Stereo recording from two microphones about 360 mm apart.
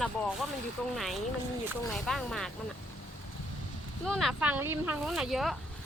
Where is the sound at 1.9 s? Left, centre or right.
Centre.